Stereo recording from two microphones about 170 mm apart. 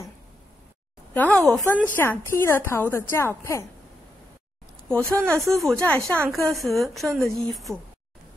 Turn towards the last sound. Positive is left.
turn(degrees=0)  # may be behind; listen again after turning